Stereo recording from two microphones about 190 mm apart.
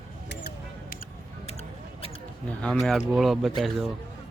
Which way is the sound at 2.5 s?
5° left (ahead or behind).